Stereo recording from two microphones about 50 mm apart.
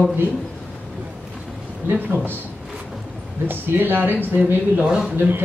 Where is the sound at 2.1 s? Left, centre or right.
Right.